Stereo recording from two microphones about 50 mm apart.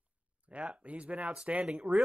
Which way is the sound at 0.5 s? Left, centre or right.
Right.